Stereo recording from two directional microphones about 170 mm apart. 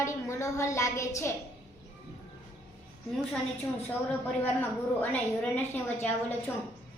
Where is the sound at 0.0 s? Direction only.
15° left (ahead or behind).